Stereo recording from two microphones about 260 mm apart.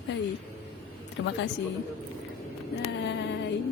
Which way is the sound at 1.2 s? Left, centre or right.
Left.